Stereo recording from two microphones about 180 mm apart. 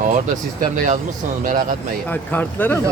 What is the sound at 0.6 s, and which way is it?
Speech, 50° right (ahead or behind).